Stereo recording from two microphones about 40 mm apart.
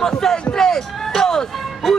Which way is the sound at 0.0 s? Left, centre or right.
Centre.